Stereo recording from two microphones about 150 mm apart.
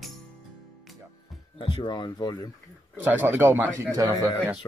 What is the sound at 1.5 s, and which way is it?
Speech, 30° left (ahead or behind).